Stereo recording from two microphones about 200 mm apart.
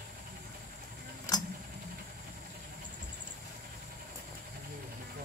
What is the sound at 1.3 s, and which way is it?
Tick-tock, 15° left (ahead or behind).